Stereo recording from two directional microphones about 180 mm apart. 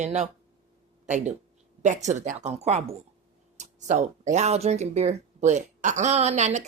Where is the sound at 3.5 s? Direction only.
40° right (ahead or behind).